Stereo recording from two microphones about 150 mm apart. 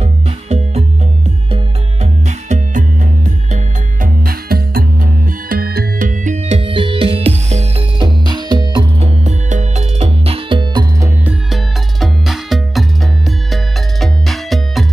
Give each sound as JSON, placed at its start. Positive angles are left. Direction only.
{"t": 0.0, "sound": "music", "side_deg": -45}
{"t": 3.5, "sound": "music", "side_deg": -70}
{"t": 8.0, "sound": "music", "side_deg": -30}
{"t": 9.0, "sound": "music", "side_deg": -50}
{"t": 11.2, "sound": "music", "side_deg": 0}